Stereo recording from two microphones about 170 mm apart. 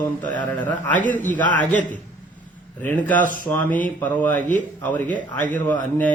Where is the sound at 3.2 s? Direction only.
55° left (ahead or behind).